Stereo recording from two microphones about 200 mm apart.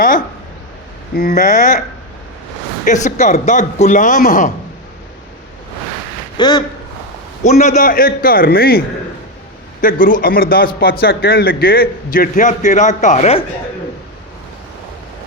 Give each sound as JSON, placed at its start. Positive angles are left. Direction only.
{"t": 1.1, "sound": "speech", "side_deg": 40}
{"t": 2.8, "sound": "speech", "side_deg": 35}
{"t": 6.3, "sound": "speech", "side_deg": 20}
{"t": 7.4, "sound": "a man's voice", "side_deg": 35}
{"t": 9.8, "sound": "a man's voice", "side_deg": 45}